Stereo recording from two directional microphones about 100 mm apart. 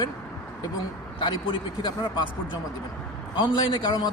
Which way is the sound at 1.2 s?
55° left (ahead or behind).